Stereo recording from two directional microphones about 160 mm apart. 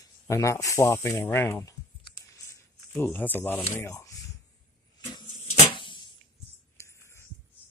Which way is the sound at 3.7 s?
15° left (ahead or behind).